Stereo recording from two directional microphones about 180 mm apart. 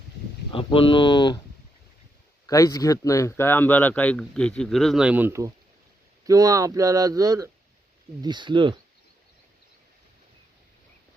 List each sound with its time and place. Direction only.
0.5 s speech: 30° left (ahead or behind)
2.5 s speech: 20° left (ahead or behind); by 8.8 s 25° right (ahead or behind)